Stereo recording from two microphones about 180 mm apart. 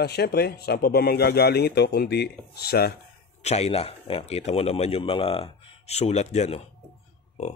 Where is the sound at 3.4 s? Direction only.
35° left (ahead or behind).